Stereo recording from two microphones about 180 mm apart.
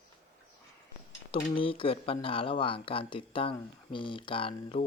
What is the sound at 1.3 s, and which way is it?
Speech, 30° left (ahead or behind).